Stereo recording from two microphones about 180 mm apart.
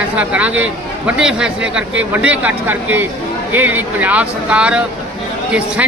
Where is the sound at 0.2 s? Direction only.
5° right (ahead or behind).